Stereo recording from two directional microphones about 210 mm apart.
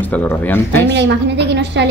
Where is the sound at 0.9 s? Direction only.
55° right (ahead or behind).